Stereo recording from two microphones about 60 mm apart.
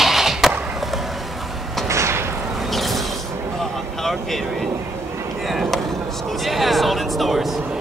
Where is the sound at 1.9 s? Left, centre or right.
Right.